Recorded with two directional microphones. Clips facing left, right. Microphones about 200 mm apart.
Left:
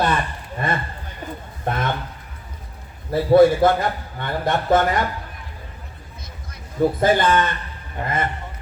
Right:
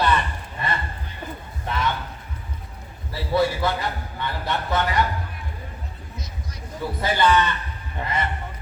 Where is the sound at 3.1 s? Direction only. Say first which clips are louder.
Left 9 dB; 50° left (ahead or behind).